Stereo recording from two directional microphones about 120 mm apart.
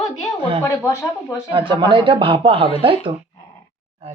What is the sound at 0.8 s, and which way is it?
Speech, 20° left (ahead or behind).